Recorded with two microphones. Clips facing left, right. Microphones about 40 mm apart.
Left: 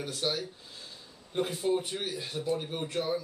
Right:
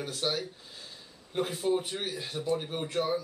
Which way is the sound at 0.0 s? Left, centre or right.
Centre.